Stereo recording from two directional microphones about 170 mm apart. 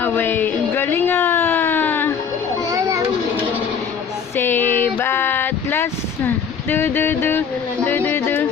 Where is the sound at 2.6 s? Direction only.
20° right (ahead or behind).